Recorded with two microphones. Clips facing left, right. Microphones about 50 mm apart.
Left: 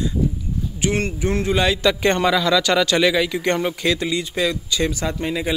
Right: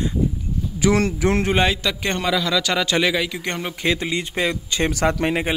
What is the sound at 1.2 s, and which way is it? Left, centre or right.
Speech, right.